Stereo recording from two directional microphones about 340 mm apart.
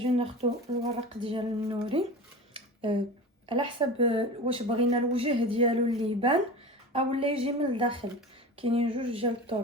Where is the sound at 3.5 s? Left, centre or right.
Centre.